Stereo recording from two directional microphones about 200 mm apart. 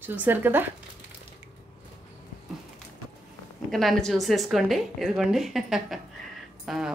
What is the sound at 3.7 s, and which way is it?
A woman's voice, centre (ahead or behind).